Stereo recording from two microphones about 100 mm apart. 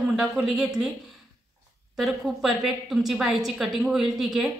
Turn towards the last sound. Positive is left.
turn(degrees=-5)  # may be behind; listen again after turning